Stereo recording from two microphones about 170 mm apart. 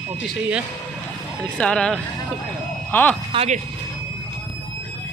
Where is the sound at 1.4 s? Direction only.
5° left (ahead or behind).